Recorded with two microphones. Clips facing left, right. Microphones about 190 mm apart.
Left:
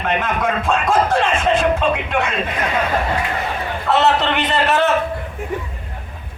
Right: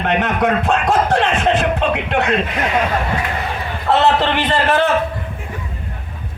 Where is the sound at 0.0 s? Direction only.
65° right (ahead or behind).